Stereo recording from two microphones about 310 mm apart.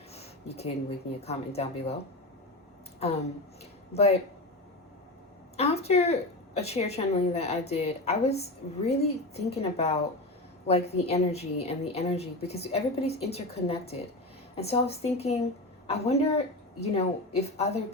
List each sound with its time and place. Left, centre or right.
0.1 s speech: centre
3.9 s a woman's voice: left
5.5 s a woman's voice: centre